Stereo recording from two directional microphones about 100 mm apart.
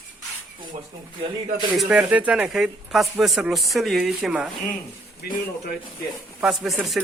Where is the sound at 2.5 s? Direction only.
5° right (ahead or behind).